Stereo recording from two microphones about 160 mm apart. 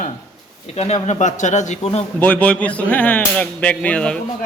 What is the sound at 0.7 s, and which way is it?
Speech, 40° left (ahead or behind).